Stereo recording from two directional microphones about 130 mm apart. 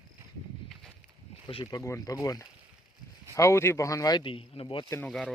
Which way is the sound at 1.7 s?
25° left (ahead or behind).